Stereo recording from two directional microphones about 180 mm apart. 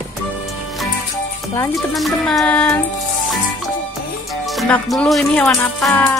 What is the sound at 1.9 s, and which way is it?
Music, centre (ahead or behind).